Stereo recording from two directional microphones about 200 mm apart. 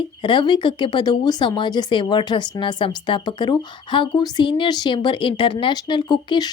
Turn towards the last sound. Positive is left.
turn(degrees=20)  # may be behind; listen again after turning